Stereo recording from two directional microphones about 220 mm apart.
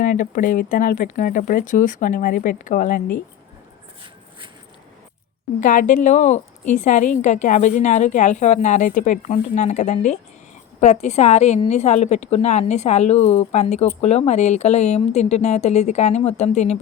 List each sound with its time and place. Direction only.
0.0 s a woman's voice: 35° left (ahead or behind)
5.5 s a woman's voice: 35° left (ahead or behind)